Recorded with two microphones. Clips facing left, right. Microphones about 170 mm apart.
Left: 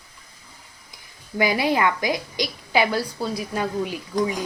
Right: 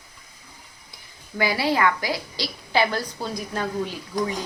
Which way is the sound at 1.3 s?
20° left (ahead or behind).